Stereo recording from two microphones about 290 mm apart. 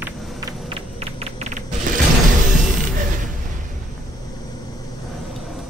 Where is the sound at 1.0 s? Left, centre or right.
Right.